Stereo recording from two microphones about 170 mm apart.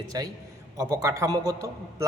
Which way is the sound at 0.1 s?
20° right (ahead or behind).